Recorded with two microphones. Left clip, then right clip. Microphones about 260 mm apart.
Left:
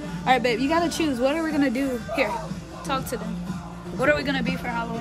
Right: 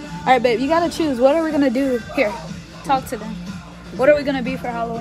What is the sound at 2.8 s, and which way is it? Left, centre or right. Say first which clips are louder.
Speech: right 8 dB; right.